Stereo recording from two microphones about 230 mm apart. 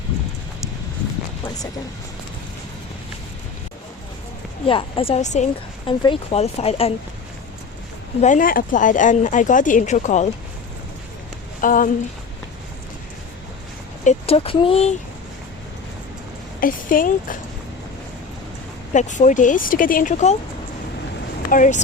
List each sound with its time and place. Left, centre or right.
4.6 s a woman's voice: left
8.2 s speech: left
11.6 s speech: left
14.0 s a woman's voice: left
16.6 s speech: left
18.9 s speech: left
21.5 s speech: left